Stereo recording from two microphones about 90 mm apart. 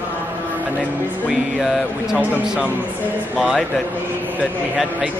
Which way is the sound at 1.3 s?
Centre (ahead or behind).